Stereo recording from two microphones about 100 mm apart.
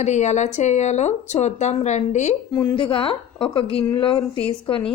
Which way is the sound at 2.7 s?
60° left (ahead or behind).